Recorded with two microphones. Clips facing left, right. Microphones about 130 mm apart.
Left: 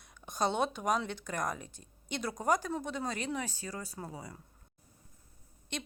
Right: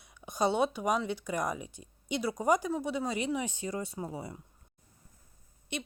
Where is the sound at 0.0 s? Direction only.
10° right (ahead or behind); by 4.4 s 25° right (ahead or behind).